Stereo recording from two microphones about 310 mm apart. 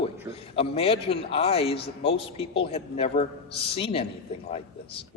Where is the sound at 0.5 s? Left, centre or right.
Centre.